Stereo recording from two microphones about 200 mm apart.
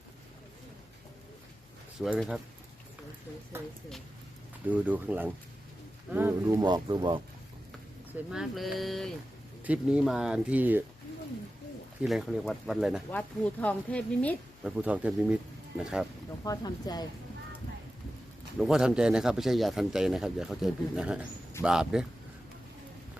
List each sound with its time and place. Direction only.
2.0 s speech: centre (ahead or behind)
4.6 s speech: 10° right (ahead or behind)
8.3 s speech: centre (ahead or behind)
12.0 s speech: centre (ahead or behind)
14.8 s speech: 5° right (ahead or behind)
16.4 s speech: 20° left (ahead or behind)
18.6 s speech: 5° right (ahead or behind)